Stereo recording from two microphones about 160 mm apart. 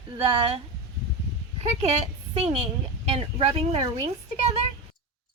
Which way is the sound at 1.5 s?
40° right (ahead or behind).